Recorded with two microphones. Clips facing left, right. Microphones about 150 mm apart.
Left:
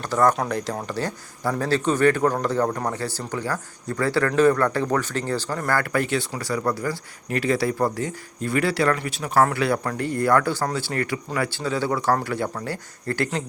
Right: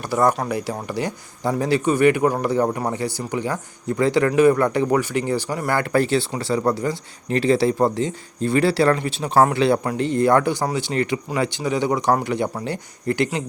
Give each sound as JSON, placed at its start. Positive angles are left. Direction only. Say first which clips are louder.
{"t": 0.0, "sound": "speech", "louder": "right 1 dB", "side_deg": -10}